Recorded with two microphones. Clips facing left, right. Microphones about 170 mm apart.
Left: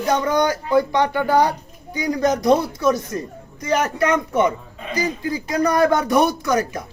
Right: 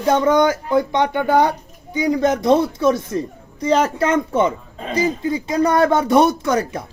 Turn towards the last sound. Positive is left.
turn(degrees=-25)  # may be behind; listen again after turning